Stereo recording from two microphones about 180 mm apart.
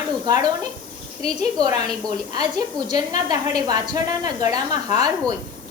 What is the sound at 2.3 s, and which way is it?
A woman's voice, 20° right (ahead or behind).